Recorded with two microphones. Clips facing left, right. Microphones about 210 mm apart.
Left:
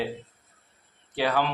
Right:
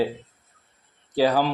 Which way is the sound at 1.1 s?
35° right (ahead or behind).